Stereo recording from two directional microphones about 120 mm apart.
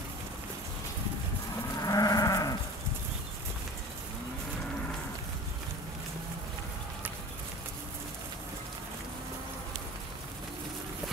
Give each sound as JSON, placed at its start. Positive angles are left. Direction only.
{"t": 1.8, "sound": "livestock", "side_deg": 30}